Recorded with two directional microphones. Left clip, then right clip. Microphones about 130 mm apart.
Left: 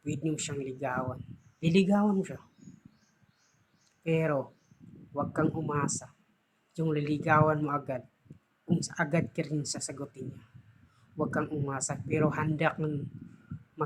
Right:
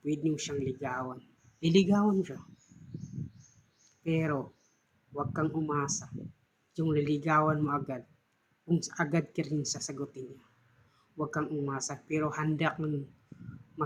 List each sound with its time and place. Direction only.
0.0 s speech: 20° left (ahead or behind)
4.0 s speech: 20° left (ahead or behind)
13.8 s heart sounds: 20° left (ahead or behind)